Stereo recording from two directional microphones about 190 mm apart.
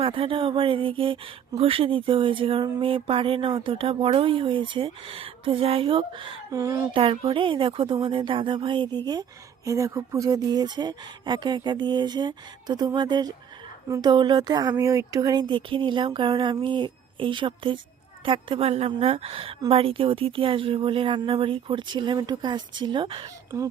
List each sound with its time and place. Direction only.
0.0 s speech: 30° right (ahead or behind)
6.5 s speech: 15° right (ahead or behind)
6.9 s speech: 30° right (ahead or behind)